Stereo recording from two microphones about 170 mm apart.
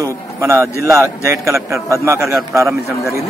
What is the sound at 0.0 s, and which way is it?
A man's voice, 15° right (ahead or behind).